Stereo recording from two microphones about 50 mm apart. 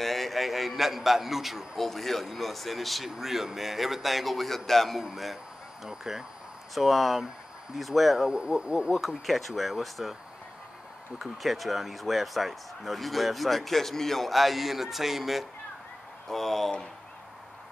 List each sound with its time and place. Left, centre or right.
0.0 s speech: centre
8.3 s speech: centre
9.0 s speech: centre
11.1 s speech: centre